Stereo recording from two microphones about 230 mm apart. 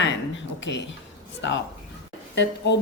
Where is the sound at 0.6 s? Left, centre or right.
Left.